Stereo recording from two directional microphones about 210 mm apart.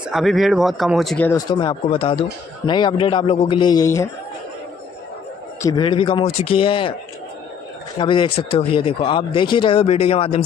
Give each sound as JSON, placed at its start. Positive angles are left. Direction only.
{"t": 0.1, "sound": "speech", "side_deg": 0}
{"t": 1.3, "sound": "speech", "side_deg": 20}
{"t": 5.6, "sound": "speech", "side_deg": 20}
{"t": 8.0, "sound": "speech", "side_deg": 25}